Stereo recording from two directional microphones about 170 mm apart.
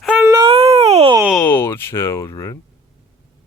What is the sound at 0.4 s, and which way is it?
Baby cry, 35° right (ahead or behind).